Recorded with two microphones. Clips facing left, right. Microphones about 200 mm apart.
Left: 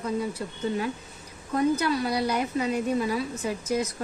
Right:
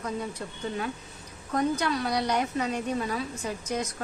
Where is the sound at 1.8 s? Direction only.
5° left (ahead or behind).